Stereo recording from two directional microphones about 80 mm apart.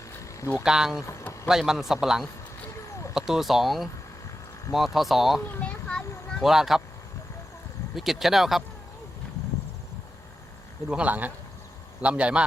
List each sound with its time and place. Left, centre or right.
0.6 s a man's voice: centre
5.5 s speech: left
6.4 s a man's voice: centre
7.9 s a man's voice: centre
10.8 s speech: centre